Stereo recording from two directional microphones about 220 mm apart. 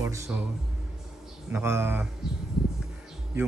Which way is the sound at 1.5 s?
10° right (ahead or behind).